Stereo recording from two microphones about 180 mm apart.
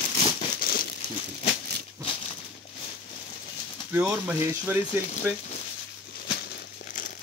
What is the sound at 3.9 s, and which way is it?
Speech, 10° right (ahead or behind).